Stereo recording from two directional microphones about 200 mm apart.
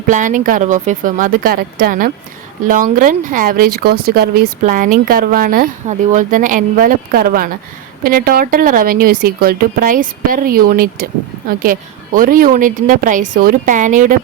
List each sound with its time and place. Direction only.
0.1 s speech: 40° right (ahead or behind)